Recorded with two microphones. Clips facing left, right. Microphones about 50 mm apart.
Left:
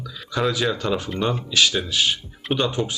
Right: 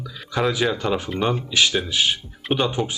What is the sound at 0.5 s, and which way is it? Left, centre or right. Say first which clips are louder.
Speech: right 1 dB; centre.